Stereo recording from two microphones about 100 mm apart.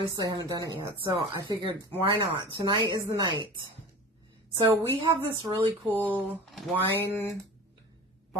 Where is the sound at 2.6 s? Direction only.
45° right (ahead or behind).